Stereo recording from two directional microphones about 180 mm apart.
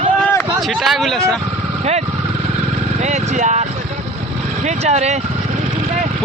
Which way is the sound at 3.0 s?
40° right (ahead or behind).